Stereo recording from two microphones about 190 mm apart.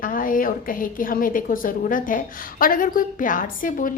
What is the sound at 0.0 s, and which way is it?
A woman's voice, 45° left (ahead or behind).